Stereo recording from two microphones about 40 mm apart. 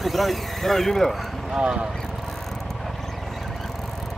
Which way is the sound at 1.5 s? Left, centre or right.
Right.